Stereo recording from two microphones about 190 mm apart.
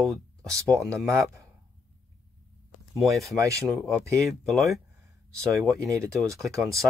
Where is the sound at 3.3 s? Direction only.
15° right (ahead or behind).